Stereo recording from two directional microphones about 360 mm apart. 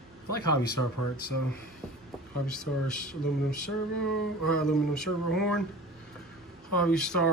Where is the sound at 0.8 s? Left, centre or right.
Left.